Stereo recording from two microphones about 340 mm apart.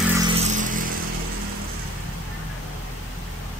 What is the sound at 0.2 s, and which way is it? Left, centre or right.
Vehicle, right.